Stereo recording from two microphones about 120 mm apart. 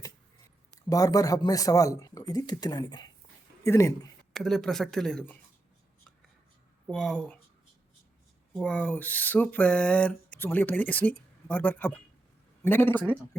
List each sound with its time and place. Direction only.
0.7 s speech: 30° left (ahead or behind)
3.6 s speech: 25° left (ahead or behind)
4.4 s speech: 5° left (ahead or behind)
6.8 s speech: 5° left (ahead or behind)
8.5 s a sound: 5° left (ahead or behind)